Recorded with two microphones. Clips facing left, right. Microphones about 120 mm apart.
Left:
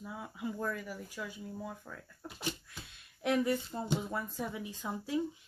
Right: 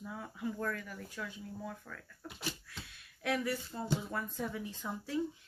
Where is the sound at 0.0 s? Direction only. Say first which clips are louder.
Even; 10° left (ahead or behind).